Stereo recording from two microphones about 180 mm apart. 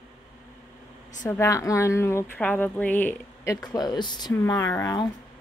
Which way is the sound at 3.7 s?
25° left (ahead or behind).